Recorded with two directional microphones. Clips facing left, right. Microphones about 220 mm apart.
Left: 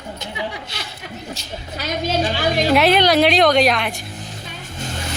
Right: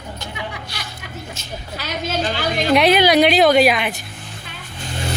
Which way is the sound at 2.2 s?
5° left (ahead or behind).